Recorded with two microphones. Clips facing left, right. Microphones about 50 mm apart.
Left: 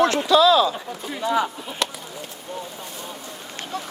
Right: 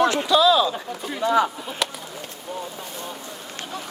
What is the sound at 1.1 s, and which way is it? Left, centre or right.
Speech, right.